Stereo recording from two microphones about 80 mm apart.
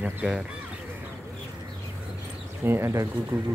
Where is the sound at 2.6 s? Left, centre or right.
Right.